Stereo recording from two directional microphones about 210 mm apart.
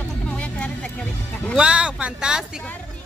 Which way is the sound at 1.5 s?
5° right (ahead or behind).